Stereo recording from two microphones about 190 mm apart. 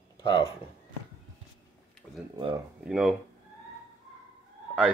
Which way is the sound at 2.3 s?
25° right (ahead or behind).